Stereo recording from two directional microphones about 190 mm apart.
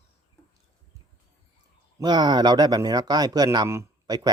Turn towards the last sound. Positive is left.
turn(degrees=-20)  # may be behind; listen again after turning